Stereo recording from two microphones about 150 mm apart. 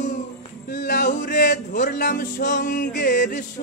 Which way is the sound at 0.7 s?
75° left (ahead or behind).